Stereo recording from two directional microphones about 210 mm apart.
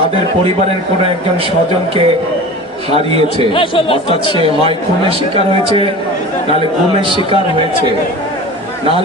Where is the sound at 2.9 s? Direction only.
25° right (ahead or behind).